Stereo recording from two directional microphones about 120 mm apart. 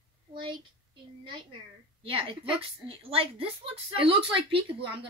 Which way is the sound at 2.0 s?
50° right (ahead or behind).